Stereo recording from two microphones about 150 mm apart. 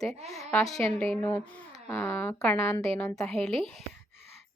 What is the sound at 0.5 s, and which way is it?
Speech, 5° left (ahead or behind).